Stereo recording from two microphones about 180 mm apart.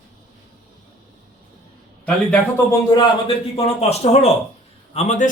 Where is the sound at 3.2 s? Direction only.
35° left (ahead or behind).